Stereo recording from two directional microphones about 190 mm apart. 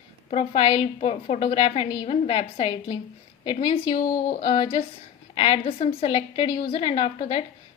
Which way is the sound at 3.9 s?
45° left (ahead or behind).